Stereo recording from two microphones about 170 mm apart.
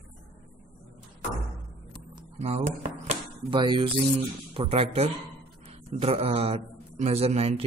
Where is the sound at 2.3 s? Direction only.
40° right (ahead or behind).